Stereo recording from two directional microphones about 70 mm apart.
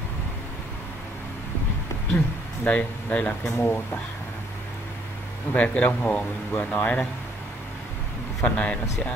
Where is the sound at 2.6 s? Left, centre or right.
Centre.